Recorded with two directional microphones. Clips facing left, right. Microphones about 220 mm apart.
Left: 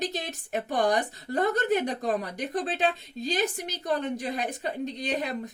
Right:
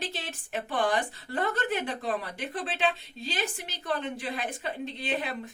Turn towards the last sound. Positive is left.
turn(degrees=40)  # may be behind; listen again after turning